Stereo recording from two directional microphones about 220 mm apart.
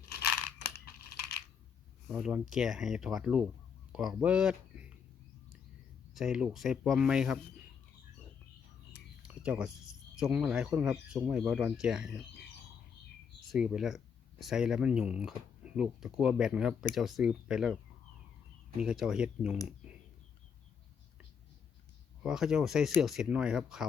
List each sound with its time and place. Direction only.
0.1 s a sound: 45° left (ahead or behind)
2.0 s speech: centre (ahead or behind)
6.1 s speech: centre (ahead or behind)
9.2 s a sound: 5° right (ahead or behind)
10.2 s speech: 5° right (ahead or behind)
13.5 s speech: centre (ahead or behind)
18.8 s speech: 5° right (ahead or behind)
22.2 s speech: centre (ahead or behind)